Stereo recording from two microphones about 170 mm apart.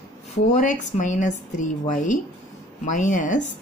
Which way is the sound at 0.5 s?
50° left (ahead or behind).